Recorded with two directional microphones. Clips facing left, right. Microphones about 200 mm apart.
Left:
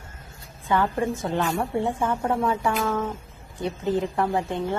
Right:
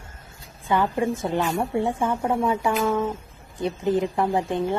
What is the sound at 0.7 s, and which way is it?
Speech, 15° right (ahead or behind).